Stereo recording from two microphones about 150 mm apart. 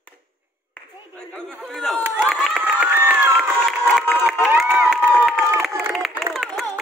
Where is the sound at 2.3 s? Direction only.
5° right (ahead or behind).